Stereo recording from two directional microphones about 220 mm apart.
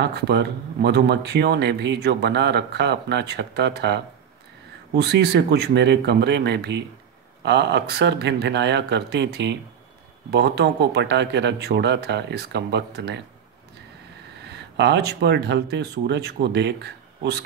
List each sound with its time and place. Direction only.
0.0 s speech: 50° right (ahead or behind)
5.0 s speech: 50° right (ahead or behind)
14.6 s speech: 50° right (ahead or behind)